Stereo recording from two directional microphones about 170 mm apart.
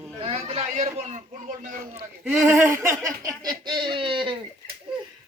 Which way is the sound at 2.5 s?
15° right (ahead or behind).